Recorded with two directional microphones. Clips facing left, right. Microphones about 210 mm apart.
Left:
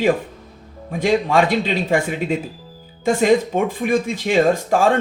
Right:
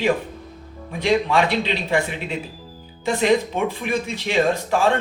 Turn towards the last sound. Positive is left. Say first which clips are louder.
# left 3 dB
turn(degrees=45)  # may be behind; listen again after turning